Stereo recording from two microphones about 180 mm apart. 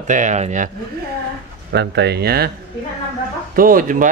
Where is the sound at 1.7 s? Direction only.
65° right (ahead or behind).